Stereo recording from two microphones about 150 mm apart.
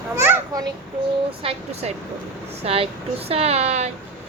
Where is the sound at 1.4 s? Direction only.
40° right (ahead or behind).